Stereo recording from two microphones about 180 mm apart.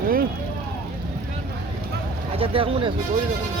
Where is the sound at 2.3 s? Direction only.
30° right (ahead or behind).